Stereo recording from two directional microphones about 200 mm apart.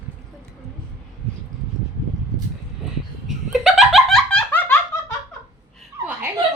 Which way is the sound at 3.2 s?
Centre (ahead or behind).